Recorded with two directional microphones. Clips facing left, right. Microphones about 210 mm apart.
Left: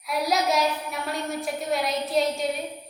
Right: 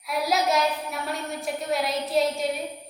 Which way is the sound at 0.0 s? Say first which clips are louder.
Even; centre (ahead or behind).